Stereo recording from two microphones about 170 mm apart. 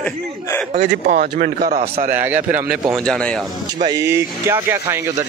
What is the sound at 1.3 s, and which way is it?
Speech, 55° right (ahead or behind).